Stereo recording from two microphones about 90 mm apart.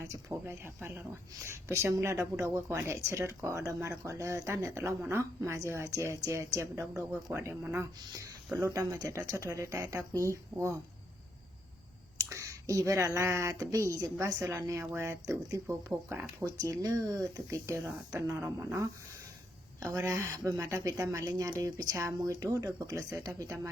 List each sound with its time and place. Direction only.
0.0 s speech: 30° right (ahead or behind)
4.9 s speech: 25° right (ahead or behind)
8.7 s speech: 40° right (ahead or behind)
12.1 s speech: 35° right (ahead or behind)
15.6 s speech: 25° right (ahead or behind)